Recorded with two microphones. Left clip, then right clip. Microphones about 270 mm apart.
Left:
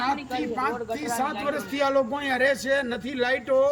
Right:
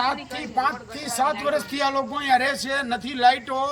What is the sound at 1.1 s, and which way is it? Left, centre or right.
A man's voice, centre.